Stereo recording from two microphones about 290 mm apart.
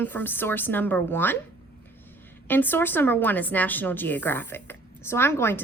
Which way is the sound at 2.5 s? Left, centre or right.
Centre.